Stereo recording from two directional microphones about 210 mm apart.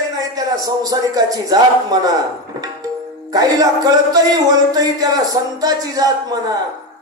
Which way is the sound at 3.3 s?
15° right (ahead or behind).